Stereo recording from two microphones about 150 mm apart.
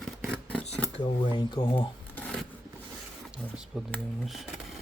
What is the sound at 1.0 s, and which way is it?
Speech, 30° left (ahead or behind).